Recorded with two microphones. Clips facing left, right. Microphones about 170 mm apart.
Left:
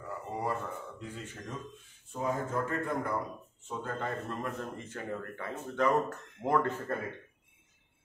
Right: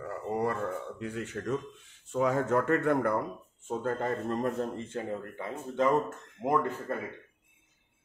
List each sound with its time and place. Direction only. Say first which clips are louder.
0.0 s a sound: right 5 dB; 70° right (ahead or behind)
2.1 s speech: right 6 dB; 80° right; by 3.2 s 65° right (ahead or behind)
3.6 s speech: right 6 dB; 45° right (ahead or behind); by 6.7 s 15° right (ahead or behind)